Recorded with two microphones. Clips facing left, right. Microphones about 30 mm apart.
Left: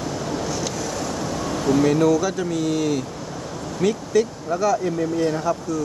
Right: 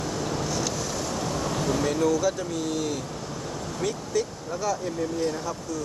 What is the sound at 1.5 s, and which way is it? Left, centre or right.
Air conditioning, centre.